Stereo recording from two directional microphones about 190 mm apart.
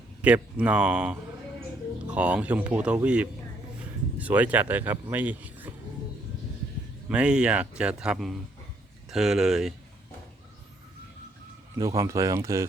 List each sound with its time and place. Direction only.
0.2 s speech: 5° right (ahead or behind)
7.1 s speech: 5° right (ahead or behind)
11.8 s speech: 15° right (ahead or behind)